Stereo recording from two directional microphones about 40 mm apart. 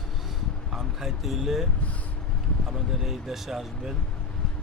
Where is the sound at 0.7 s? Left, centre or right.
Centre.